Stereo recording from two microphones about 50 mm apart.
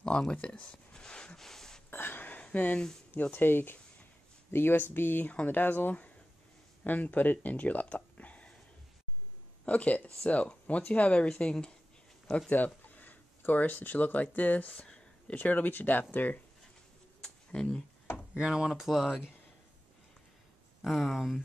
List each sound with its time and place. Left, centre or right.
0.0 s a sound: centre
1.9 s a sound: left
2.4 s speech: left
5.2 s speech: left
9.7 s speech: left
12.4 s speech: left
14.8 s a sound: left
15.3 s speech: left
17.5 s speech: centre
18.3 s speech: centre
20.8 s speech: centre